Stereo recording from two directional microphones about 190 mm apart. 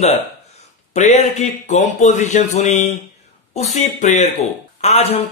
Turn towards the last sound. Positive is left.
turn(degrees=35)  # may be behind; listen again after turning